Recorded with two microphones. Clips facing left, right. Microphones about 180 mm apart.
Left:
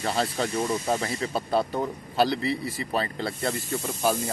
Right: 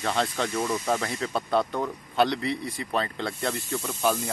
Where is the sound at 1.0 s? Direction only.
5° left (ahead or behind).